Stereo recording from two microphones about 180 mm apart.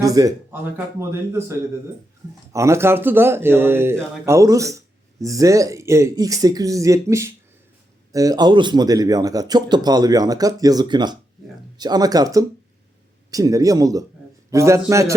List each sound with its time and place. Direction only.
0.0 s speech: 20° right (ahead or behind)